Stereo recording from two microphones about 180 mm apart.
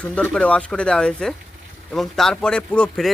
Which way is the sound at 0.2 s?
5° left (ahead or behind).